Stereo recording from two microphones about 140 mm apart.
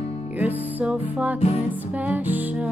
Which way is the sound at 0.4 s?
10° right (ahead or behind).